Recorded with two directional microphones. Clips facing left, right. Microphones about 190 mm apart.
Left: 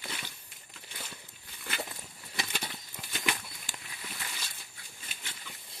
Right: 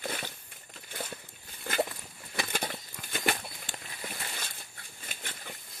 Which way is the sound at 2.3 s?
50° right (ahead or behind).